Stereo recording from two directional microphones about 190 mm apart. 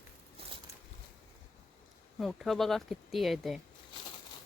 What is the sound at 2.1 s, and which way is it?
Speech, centre (ahead or behind).